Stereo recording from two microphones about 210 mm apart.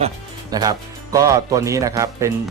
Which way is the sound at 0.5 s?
15° right (ahead or behind).